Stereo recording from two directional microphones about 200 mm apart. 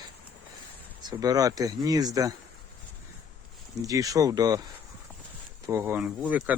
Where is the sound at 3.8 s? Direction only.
15° right (ahead or behind).